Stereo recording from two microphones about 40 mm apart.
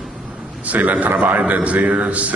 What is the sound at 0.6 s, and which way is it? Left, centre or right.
A man's voice, right.